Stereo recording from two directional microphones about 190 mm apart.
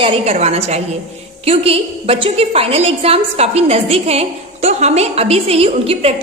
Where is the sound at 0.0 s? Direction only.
35° right (ahead or behind).